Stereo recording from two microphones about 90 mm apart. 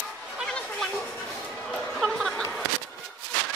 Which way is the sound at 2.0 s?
Centre (ahead or behind).